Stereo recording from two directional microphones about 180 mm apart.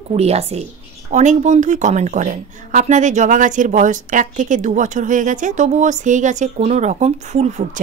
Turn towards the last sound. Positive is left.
turn(degrees=-40)  # may be behind; listen again after turning